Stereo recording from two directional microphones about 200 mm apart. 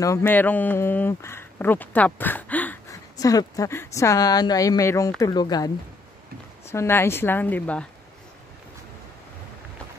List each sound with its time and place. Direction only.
0.0 s speech: 10° left (ahead or behind)
6.7 s speech: 10° left (ahead or behind)